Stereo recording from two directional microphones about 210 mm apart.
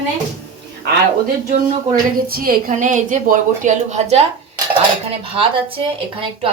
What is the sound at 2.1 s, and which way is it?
A woman's voice, 45° right (ahead or behind).